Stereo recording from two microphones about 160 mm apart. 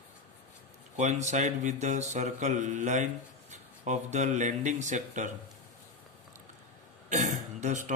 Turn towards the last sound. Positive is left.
turn(degrees=-50)  # may be behind; listen again after turning